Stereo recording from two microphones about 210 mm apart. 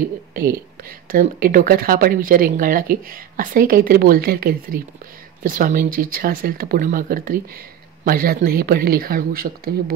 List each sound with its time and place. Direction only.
0.3 s speech: 45° right (ahead or behind)